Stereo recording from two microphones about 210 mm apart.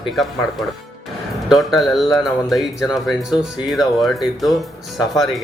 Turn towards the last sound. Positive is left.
turn(degrees=0)  # may be behind; listen again after turning